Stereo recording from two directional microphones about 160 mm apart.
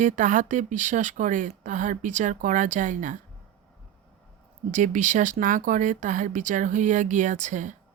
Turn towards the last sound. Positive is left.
turn(degrees=-50)  # may be behind; listen again after turning